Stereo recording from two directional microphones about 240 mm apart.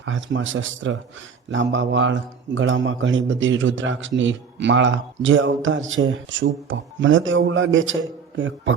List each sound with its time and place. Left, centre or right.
0.0 s a man's voice: right